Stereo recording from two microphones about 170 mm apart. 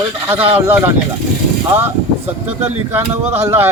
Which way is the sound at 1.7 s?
10° right (ahead or behind).